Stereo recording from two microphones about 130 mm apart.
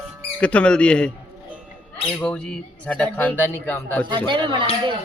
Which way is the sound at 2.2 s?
10° left (ahead or behind).